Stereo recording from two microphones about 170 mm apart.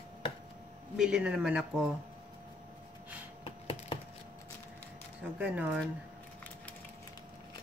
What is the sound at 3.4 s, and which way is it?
Computer keyboard, 30° left (ahead or behind).